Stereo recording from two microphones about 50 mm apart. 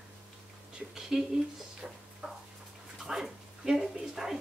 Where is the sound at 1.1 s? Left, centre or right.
Centre.